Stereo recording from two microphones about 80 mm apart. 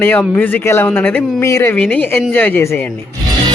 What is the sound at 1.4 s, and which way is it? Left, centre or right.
Speech, left.